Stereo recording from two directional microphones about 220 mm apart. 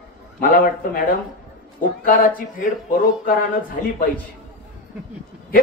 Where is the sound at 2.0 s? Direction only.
40° left (ahead or behind).